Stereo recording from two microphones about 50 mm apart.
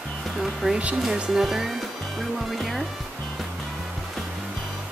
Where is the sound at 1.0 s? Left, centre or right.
Centre.